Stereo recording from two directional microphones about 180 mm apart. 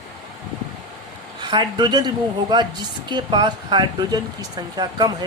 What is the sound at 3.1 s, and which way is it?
Speech, 25° right (ahead or behind).